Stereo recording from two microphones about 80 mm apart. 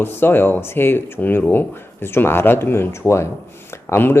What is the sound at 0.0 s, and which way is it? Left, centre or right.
Speech, left.